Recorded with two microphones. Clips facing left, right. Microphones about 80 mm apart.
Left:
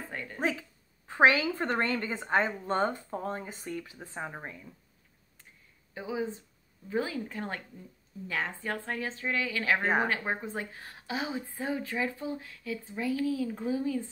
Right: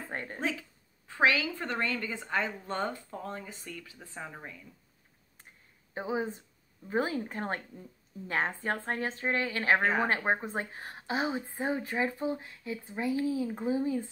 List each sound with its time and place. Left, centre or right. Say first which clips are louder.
0.1 s a sound: right 2 dB; right
0.4 s a woman's voice: left 5 dB; left
5.9 s a woman's voice: right 1 dB; right